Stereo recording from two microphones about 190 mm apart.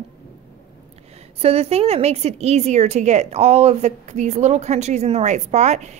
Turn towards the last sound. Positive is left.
turn(degrees=-35)  # may be behind; listen again after turning